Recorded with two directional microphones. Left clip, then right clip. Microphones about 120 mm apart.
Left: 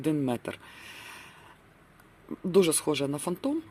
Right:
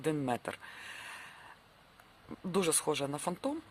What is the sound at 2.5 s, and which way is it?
Speech, 10° right (ahead or behind).